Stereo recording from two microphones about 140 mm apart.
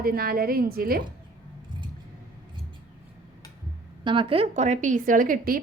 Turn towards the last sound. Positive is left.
turn(degrees=-85)